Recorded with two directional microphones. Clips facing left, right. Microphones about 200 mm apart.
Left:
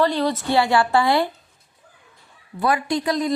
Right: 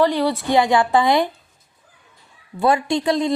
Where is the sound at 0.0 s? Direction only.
15° right (ahead or behind).